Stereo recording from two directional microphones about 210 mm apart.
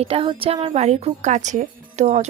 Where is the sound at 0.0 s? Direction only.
25° right (ahead or behind).